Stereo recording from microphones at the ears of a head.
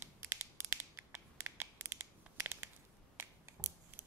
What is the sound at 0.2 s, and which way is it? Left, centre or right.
Crushing, right.